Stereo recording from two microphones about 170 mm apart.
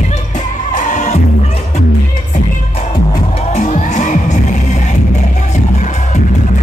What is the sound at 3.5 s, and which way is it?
Music, 45° left (ahead or behind).